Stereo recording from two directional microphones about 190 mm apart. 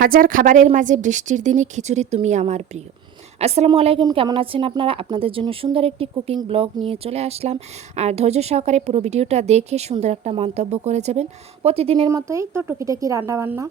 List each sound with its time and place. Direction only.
0.0 s speech: 50° right (ahead or behind); by 12.0 s 30° right (ahead or behind)
12.0 s a woman's voice: 15° right (ahead or behind)